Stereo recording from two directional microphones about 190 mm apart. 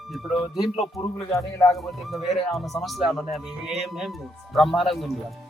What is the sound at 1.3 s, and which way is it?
Speech, 15° left (ahead or behind).